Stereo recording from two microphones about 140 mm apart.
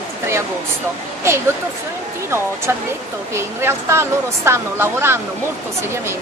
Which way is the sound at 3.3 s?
20° right (ahead or behind).